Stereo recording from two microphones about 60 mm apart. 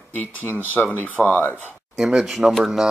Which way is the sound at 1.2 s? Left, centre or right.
Left.